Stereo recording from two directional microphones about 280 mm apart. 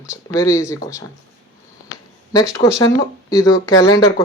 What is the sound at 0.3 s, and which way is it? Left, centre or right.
Speech, centre.